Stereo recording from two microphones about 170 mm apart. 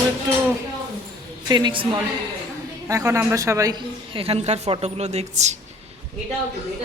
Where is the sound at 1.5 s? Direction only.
30° right (ahead or behind).